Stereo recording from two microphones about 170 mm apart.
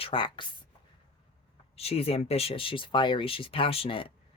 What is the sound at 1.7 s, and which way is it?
Speech, 35° left (ahead or behind).